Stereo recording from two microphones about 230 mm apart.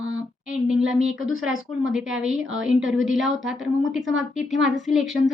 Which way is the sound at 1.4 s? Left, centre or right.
Centre.